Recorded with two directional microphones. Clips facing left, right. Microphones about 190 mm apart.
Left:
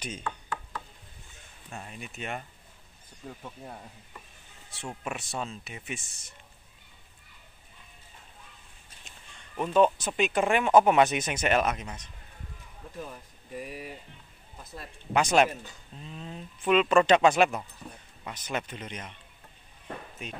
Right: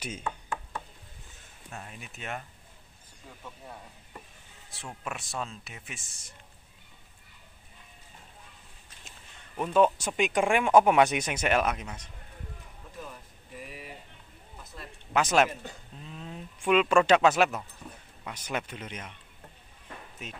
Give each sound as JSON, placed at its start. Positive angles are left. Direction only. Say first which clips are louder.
{"t": 0.0, "sound": "speech", "louder": "even", "side_deg": -5}
{"t": 1.9, "sound": "speech", "louder": "left 3 dB", "side_deg": 0}
{"t": 5.0, "sound": "speech", "louder": "left 1 dB", "side_deg": 0}
{"t": 9.6, "sound": "speech", "louder": "left 1 dB", "side_deg": -5}
{"t": 13.6, "sound": "speech", "louder": "left 5 dB", "side_deg": 40}
{"t": 15.1, "sound": "speech", "louder": "left 1 dB", "side_deg": 0}
{"t": 20.2, "sound": "speech", "louder": "even", "side_deg": 0}